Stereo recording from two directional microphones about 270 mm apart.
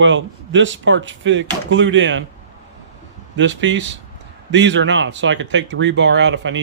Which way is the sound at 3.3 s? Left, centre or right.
Right.